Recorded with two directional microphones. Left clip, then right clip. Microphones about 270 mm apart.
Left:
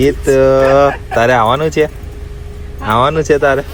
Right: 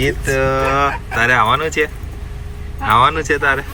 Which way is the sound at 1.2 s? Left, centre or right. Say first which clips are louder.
Left 3 dB; centre.